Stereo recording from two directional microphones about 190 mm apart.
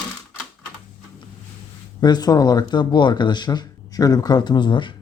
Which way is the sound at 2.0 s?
20° left (ahead or behind).